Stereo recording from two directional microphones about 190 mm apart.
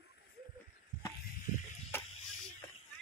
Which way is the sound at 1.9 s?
10° left (ahead or behind).